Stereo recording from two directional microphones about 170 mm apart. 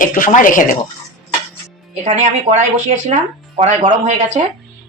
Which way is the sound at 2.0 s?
50° right (ahead or behind).